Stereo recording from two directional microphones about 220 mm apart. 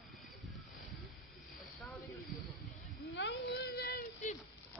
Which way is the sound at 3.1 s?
50° left (ahead or behind).